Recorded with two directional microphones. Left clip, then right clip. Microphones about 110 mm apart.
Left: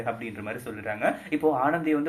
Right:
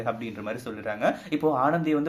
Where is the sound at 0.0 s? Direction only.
35° right (ahead or behind).